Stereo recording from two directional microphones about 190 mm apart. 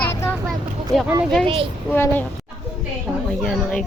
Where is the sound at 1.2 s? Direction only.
Centre (ahead or behind).